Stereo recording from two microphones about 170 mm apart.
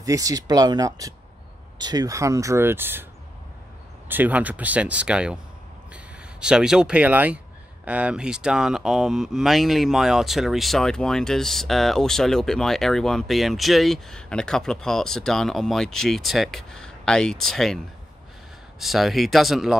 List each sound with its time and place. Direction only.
0.0 s speech: 20° right (ahead or behind)
4.1 s speech: 10° right (ahead or behind)
6.4 s speech: 5° right (ahead or behind)
18.8 s speech: centre (ahead or behind)